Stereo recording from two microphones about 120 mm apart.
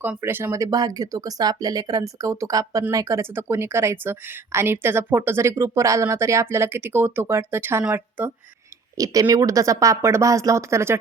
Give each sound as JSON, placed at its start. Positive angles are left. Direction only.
{"t": 0.0, "sound": "speech", "side_deg": -15}
{"t": 9.0, "sound": "speech", "side_deg": -30}